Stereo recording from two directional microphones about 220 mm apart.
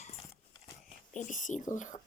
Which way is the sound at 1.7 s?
35° left (ahead or behind).